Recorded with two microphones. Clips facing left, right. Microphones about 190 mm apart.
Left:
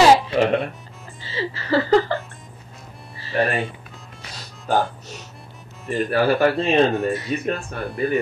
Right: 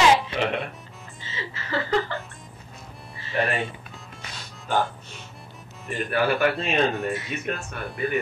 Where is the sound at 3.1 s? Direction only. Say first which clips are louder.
Left 4 dB; 35° left (ahead or behind).